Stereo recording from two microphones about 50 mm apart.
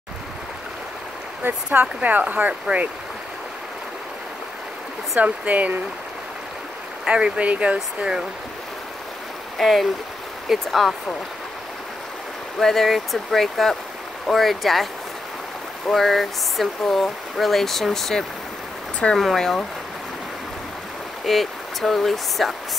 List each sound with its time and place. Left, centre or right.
1.4 s speech: right
5.2 s speech: right
7.1 s speech: right
8.0 s speech: centre
9.6 s speech: centre
12.5 s speech: centre
15.9 s speech: centre
21.3 s speech: centre